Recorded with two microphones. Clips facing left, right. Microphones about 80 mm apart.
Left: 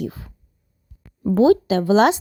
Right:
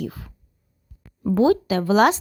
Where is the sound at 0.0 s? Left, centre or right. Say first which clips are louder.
Left 2 dB; left.